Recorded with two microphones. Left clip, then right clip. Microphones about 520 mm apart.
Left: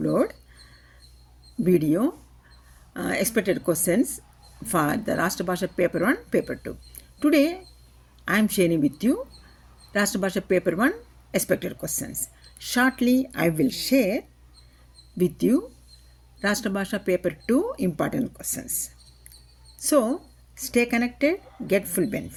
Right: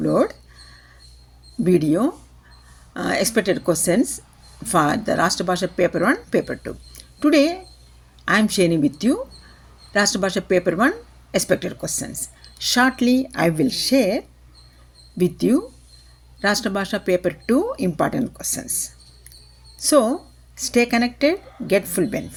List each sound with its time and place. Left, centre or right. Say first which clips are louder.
0.0 s speech: right 5 dB; left
1.6 s speech: right 4 dB; left